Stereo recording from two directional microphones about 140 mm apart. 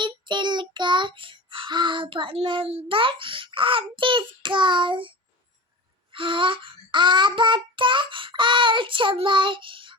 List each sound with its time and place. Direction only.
0.0 s child singing: 35° right (ahead or behind)